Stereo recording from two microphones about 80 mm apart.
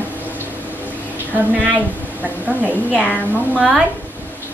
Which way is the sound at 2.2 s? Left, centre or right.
Right.